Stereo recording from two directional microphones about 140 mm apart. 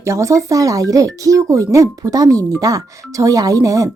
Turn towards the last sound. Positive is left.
turn(degrees=-25)  # may be behind; listen again after turning